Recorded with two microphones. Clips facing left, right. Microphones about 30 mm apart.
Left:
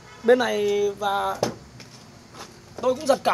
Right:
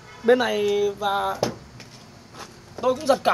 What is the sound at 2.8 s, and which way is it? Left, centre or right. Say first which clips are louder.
Speech: right 1 dB; centre.